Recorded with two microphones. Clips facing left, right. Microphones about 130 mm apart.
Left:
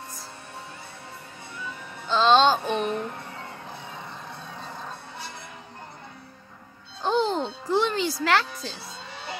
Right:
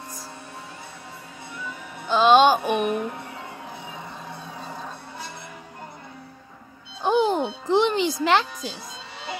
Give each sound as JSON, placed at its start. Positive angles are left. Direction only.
{"t": 2.0, "sound": "music", "side_deg": -15}
{"t": 7.0, "sound": "music", "side_deg": -15}